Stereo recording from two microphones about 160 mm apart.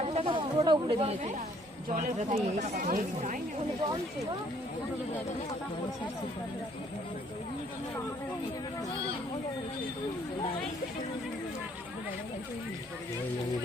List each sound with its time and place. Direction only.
0.0 s chatter: 40° right (ahead or behind)
1.9 s speech: 50° right (ahead or behind)